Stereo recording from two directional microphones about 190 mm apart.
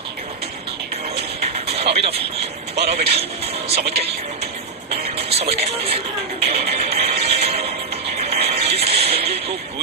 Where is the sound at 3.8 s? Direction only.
55° right (ahead or behind).